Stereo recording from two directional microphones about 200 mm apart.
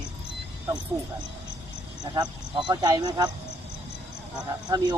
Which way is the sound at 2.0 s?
20° right (ahead or behind).